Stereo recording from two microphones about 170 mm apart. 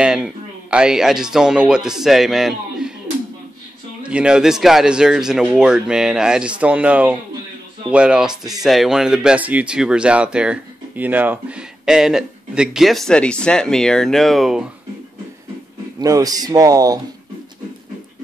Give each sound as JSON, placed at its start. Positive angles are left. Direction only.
{"t": 0.0, "sound": "speech", "side_deg": -5}
{"t": 4.0, "sound": "speech", "side_deg": -5}
{"t": 16.0, "sound": "speech", "side_deg": -20}